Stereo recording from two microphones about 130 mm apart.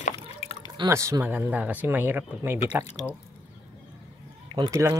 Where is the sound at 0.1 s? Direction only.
40° left (ahead or behind).